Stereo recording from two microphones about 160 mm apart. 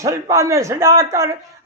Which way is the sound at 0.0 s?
20° right (ahead or behind).